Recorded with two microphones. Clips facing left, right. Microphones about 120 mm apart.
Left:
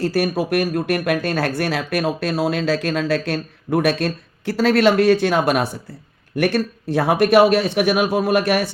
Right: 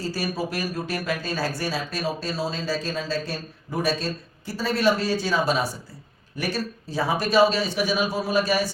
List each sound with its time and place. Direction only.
0.0 s speech: 65° left (ahead or behind)